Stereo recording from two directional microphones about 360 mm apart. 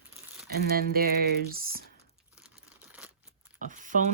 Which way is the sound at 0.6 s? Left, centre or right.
Right.